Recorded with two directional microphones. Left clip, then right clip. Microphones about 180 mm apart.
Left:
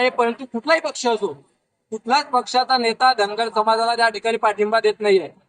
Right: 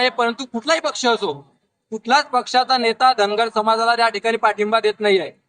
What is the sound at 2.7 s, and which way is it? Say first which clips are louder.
A man's voice: even; 20° right (ahead or behind).